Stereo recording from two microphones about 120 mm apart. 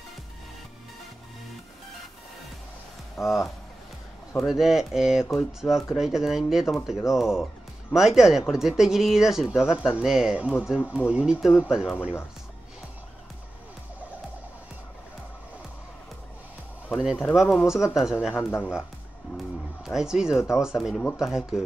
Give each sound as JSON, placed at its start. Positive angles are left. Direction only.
{"t": 3.3, "sound": "speech", "side_deg": 0}
{"t": 16.9, "sound": "speech", "side_deg": -5}
{"t": 18.3, "sound": "speech", "side_deg": 20}
{"t": 19.3, "sound": "speech", "side_deg": -5}